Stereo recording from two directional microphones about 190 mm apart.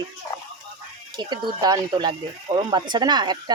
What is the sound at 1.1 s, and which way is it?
Speech, 25° right (ahead or behind).